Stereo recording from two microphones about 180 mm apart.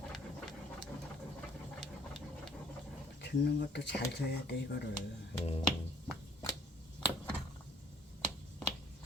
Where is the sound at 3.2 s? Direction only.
70° left (ahead or behind).